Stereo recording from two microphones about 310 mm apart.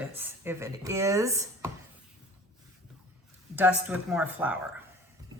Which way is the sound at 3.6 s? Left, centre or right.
Centre.